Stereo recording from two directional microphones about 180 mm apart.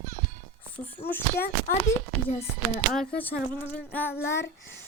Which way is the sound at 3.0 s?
10° left (ahead or behind).